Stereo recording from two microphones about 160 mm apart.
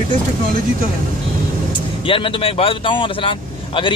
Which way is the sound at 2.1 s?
35° left (ahead or behind).